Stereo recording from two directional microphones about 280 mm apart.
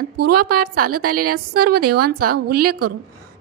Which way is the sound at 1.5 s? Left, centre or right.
Right.